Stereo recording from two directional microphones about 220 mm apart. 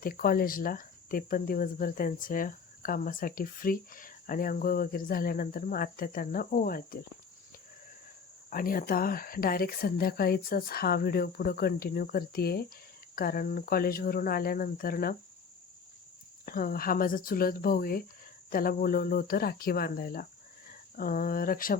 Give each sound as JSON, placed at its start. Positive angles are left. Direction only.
{"t": 0.0, "sound": "speech", "side_deg": 40}
{"t": 8.4, "sound": "speech", "side_deg": 40}
{"t": 16.5, "sound": "speech", "side_deg": 40}